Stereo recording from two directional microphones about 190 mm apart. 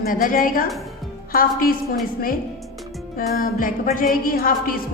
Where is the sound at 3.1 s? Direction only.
45° left (ahead or behind).